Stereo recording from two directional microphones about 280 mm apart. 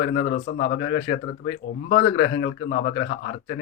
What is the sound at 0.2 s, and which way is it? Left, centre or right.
Speech, left.